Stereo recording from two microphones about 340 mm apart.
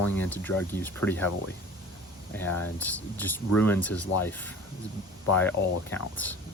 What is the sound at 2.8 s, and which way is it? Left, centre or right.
Speech, centre.